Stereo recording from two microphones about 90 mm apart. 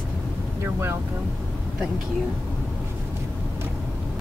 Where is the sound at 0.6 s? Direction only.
30° right (ahead or behind).